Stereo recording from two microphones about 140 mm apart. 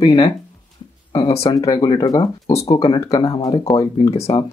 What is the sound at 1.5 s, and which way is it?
Speech, 25° left (ahead or behind).